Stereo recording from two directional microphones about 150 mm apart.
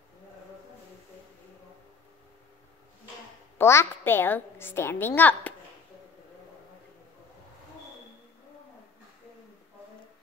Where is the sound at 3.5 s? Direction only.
15° left (ahead or behind).